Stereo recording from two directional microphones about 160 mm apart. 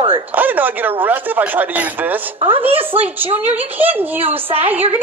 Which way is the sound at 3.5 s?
10° right (ahead or behind).